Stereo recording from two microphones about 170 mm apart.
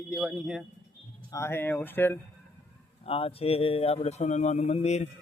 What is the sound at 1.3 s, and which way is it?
Speech, 15° left (ahead or behind).